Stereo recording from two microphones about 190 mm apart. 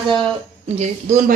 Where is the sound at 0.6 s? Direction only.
35° right (ahead or behind).